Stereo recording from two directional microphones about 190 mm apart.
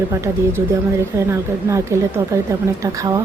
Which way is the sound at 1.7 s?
15° right (ahead or behind).